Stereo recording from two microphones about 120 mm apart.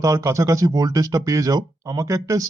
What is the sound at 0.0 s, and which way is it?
Speech, 25° right (ahead or behind).